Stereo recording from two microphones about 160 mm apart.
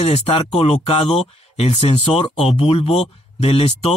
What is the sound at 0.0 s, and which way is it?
Speech, 40° left (ahead or behind).